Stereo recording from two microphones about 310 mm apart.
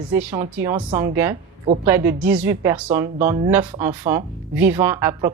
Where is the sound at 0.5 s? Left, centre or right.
Centre.